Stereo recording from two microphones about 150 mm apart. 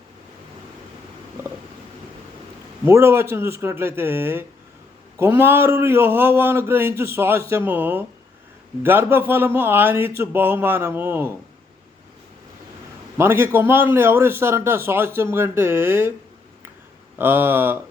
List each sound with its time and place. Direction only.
2.8 s a man's voice: 15° right (ahead or behind)
13.1 s a man's voice: 15° right (ahead or behind)
17.2 s a man's voice: 15° right (ahead or behind)